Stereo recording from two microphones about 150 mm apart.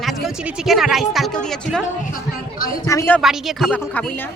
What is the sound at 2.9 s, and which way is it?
Speech, 20° left (ahead or behind).